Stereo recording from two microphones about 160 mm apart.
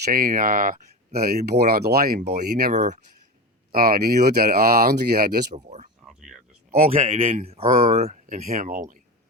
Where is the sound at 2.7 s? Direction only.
45° right (ahead or behind).